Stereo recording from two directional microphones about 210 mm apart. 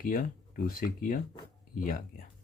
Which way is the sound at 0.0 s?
40° left (ahead or behind).